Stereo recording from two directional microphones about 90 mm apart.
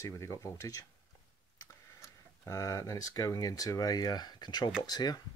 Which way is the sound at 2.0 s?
40° left (ahead or behind).